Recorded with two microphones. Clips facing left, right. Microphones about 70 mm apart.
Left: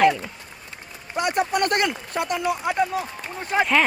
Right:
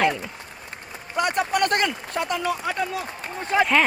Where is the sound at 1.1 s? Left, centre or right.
Right.